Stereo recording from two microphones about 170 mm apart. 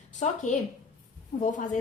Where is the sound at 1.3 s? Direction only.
40° left (ahead or behind).